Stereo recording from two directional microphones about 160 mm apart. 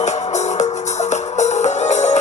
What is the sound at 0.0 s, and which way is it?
Music, 45° left (ahead or behind).